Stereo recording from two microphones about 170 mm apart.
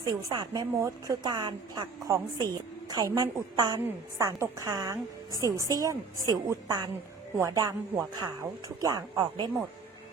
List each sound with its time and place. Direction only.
0.0 s a woman's voice: 25° right (ahead or behind)
8.8 s a woman's voice: 20° right (ahead or behind)